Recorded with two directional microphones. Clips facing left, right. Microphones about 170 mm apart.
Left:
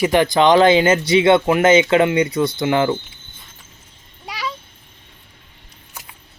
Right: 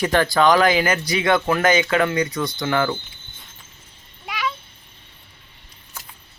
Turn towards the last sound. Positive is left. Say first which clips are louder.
# right 1 dB
turn(degrees=35)  # may be behind; listen again after turning